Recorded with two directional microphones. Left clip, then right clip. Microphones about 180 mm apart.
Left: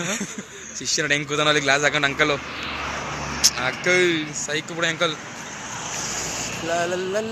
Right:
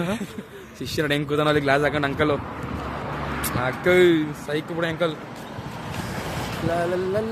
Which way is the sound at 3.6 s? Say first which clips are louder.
Right 5 dB; 25° right (ahead or behind).